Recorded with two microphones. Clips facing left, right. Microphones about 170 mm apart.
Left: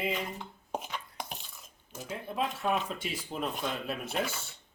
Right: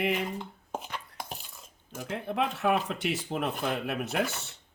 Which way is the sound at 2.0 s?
65° right (ahead or behind).